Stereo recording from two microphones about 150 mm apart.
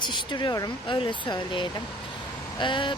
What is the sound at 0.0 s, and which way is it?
Speech, 30° left (ahead or behind).